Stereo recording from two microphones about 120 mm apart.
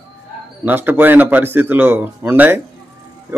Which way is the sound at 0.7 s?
15° right (ahead or behind).